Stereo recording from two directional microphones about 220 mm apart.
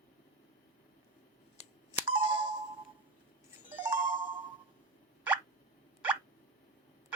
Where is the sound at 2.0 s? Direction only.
25° right (ahead or behind).